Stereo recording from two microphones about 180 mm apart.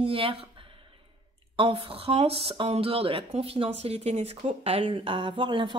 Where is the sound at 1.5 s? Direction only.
30° right (ahead or behind).